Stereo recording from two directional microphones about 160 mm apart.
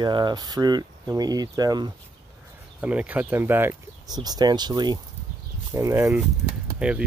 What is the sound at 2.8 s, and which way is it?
Speech, 10° right (ahead or behind).